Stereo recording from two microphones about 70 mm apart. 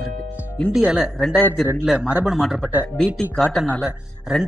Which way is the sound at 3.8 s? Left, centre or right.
Centre.